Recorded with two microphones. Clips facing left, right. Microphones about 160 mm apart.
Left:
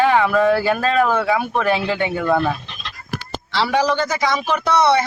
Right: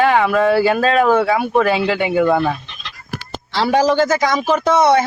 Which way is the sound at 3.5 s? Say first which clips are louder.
Right 4 dB; 45° right (ahead or behind).